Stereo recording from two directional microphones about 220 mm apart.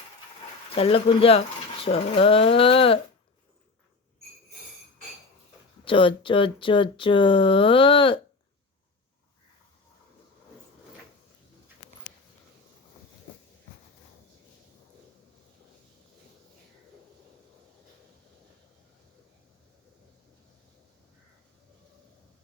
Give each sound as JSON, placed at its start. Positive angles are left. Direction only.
{"t": 0.7, "sound": "speech", "side_deg": 25}
{"t": 5.8, "sound": "speech", "side_deg": 25}